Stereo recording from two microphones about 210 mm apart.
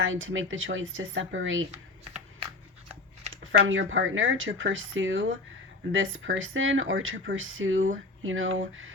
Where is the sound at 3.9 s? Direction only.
70° right (ahead or behind).